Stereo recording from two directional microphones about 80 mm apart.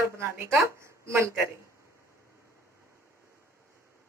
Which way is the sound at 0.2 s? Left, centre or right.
Right.